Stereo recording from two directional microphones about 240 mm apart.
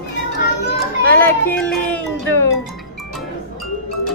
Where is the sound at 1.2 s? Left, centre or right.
Centre.